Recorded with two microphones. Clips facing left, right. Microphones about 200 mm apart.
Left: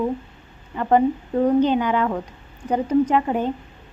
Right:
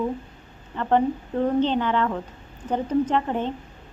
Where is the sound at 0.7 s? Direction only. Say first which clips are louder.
Left 3 dB; 10° left (ahead or behind).